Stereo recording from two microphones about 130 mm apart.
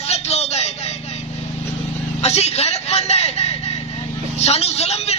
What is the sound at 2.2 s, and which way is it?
Vehicle, 55° left (ahead or behind).